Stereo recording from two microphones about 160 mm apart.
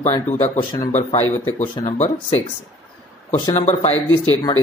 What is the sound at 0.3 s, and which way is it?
Speech, 50° left (ahead or behind).